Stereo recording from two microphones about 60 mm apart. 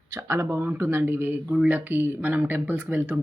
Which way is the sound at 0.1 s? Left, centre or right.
Right.